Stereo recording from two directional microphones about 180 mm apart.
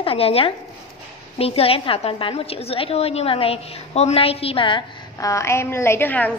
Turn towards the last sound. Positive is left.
turn(degrees=10)  # may be behind; listen again after turning